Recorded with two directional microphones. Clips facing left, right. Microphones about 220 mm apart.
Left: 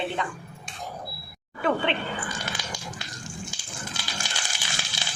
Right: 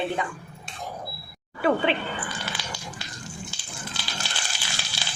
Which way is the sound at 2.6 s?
45° left (ahead or behind).